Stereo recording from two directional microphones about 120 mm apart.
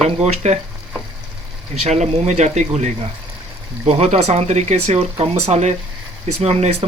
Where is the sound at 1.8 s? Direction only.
70° right (ahead or behind).